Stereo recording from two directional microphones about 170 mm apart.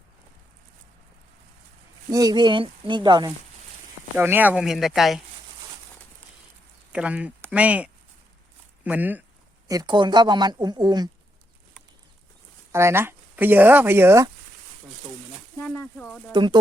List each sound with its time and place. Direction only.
2.0 s speech: 20° right (ahead or behind)
4.2 s speech: 10° right (ahead or behind)
6.9 s speech: 5° right (ahead or behind)
9.6 s speech: 25° right (ahead or behind)
12.7 s speech: 15° right (ahead or behind)
15.5 s speech: 10° left (ahead or behind)
16.3 s speech: 25° right (ahead or behind)